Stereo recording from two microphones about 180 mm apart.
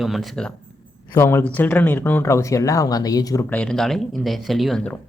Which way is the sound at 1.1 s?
15° left (ahead or behind).